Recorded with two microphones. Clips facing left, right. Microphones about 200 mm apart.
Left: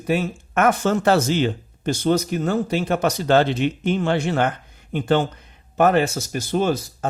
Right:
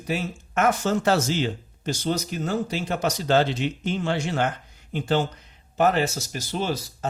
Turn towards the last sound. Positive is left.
turn(degrees=50)  # may be behind; listen again after turning